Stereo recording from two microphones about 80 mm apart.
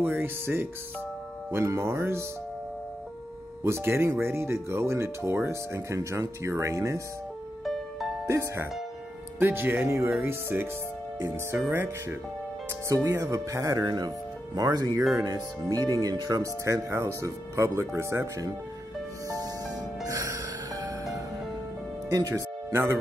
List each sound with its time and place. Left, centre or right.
0.0 s speech: right
3.6 s speech: right
7.6 s music: centre
8.3 s speech: right
11.7 s speech: right
13.8 s speech: right
19.2 s music: right
22.1 s speech: right